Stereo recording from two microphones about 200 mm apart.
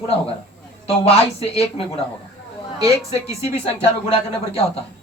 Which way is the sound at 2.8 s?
15° right (ahead or behind).